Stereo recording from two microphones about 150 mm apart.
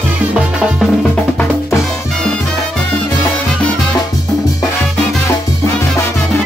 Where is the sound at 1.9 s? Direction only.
5° left (ahead or behind).